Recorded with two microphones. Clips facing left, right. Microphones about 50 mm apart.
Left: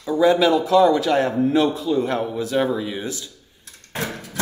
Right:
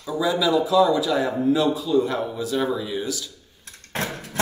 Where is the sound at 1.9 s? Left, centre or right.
Left.